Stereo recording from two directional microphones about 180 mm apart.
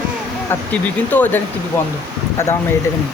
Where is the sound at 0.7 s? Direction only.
10° left (ahead or behind).